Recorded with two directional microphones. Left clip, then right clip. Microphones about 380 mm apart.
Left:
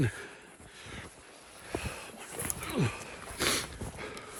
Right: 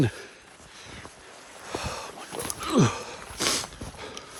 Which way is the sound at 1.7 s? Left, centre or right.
Centre.